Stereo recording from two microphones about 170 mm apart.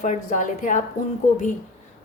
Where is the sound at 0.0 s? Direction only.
45° left (ahead or behind).